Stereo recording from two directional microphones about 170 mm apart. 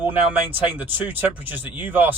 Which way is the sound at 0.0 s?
10° right (ahead or behind).